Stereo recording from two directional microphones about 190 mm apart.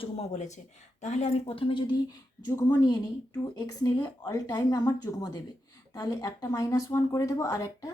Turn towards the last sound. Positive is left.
turn(degrees=20)  # may be behind; listen again after turning